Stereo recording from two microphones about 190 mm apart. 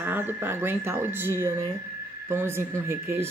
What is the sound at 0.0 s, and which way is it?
Speech, 10° right (ahead or behind).